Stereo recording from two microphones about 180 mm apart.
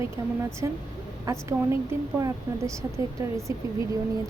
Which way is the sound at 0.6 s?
15° right (ahead or behind).